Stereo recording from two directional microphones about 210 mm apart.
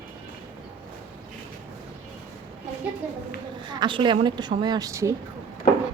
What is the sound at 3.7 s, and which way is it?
A woman's voice, 20° right (ahead or behind).